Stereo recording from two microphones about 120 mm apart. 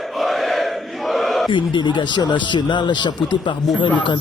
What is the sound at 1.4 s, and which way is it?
A man's voice, 40° left (ahead or behind).